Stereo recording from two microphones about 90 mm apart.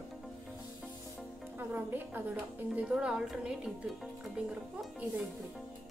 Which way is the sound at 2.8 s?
10° right (ahead or behind).